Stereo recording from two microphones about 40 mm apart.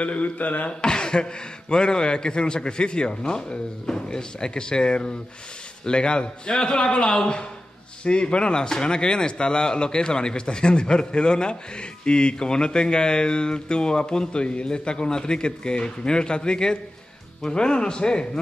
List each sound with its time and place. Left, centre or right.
0.0 s speech: left
0.7 s speech: left